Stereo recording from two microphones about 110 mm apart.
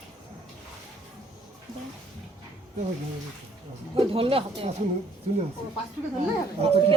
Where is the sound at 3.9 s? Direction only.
55° right (ahead or behind).